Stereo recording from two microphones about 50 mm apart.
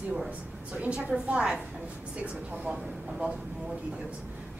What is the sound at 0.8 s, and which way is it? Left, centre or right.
Speech, right.